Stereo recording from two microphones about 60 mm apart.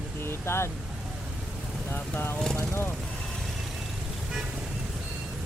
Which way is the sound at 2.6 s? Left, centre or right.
Left.